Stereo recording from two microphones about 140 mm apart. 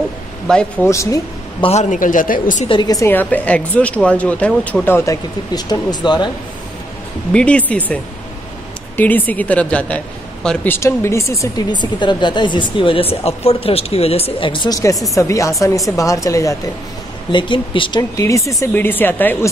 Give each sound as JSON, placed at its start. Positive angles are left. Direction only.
{"t": 0.5, "sound": "speech", "side_deg": 5}
{"t": 0.8, "sound": "speech", "side_deg": 20}
{"t": 1.6, "sound": "a man's voice", "side_deg": 50}
{"t": 2.7, "sound": "speech", "side_deg": 30}
{"t": 3.1, "sound": "speech", "side_deg": 10}
{"t": 7.3, "sound": "a woman's voice", "side_deg": 10}
{"t": 17.3, "sound": "a woman's voice", "side_deg": 35}
{"t": 18.1, "sound": "speech", "side_deg": 20}